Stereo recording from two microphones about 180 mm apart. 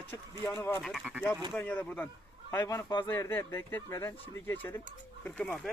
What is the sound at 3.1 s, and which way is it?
Speech, 10° left (ahead or behind).